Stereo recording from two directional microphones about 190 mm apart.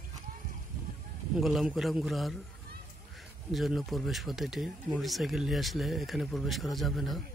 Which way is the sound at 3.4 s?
Centre (ahead or behind).